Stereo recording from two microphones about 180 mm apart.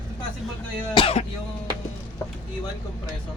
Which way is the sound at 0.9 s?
30° left (ahead or behind).